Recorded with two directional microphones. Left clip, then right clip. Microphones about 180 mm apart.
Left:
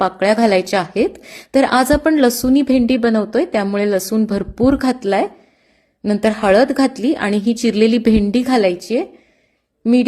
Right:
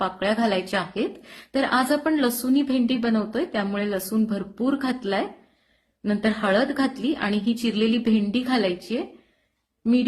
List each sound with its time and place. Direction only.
0.0 s speech: 40° left (ahead or behind)